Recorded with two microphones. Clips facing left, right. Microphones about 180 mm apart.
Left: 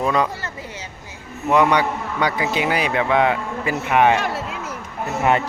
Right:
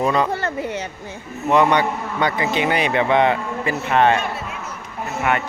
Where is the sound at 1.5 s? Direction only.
10° left (ahead or behind).